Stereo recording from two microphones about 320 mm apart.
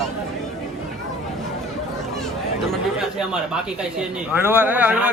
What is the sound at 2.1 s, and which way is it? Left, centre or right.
Speech, centre.